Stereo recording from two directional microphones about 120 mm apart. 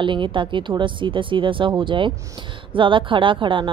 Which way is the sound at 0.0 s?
45° right (ahead or behind).